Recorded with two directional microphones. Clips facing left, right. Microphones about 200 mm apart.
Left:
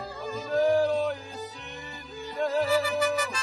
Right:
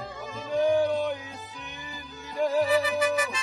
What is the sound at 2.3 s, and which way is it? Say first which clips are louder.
Music: right 2 dB; centre (ahead or behind).